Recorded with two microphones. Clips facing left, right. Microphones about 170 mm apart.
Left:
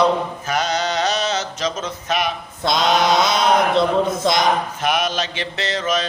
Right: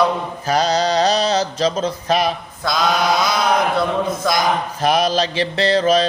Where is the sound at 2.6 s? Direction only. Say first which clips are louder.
Left 1 dB; 25° left (ahead or behind).